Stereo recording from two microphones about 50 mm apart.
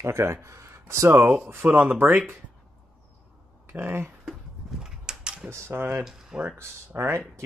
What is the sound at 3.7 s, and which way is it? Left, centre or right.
Speech, right.